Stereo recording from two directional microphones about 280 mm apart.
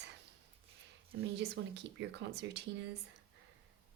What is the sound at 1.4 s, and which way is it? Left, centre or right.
Speech, right.